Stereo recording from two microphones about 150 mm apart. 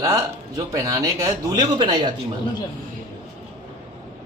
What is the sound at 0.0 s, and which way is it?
A man's voice, 25° right (ahead or behind).